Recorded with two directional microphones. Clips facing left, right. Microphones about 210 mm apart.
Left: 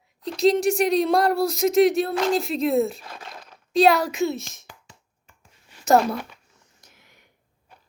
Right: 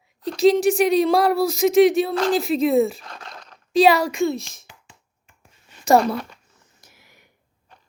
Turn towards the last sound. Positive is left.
turn(degrees=-5)  # may be behind; listen again after turning